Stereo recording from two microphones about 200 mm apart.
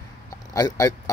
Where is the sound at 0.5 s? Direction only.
15° left (ahead or behind).